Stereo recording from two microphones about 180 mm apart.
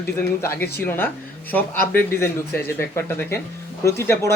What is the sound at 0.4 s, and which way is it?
Speech, 15° left (ahead or behind).